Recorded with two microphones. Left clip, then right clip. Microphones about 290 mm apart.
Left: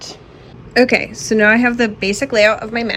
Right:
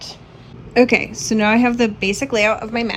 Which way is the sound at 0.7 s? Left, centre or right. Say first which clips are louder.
Left 1 dB; centre.